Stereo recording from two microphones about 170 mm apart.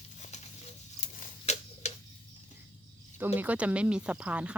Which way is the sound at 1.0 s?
50° left (ahead or behind).